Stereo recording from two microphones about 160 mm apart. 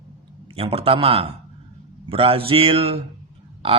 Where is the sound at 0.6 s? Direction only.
35° right (ahead or behind).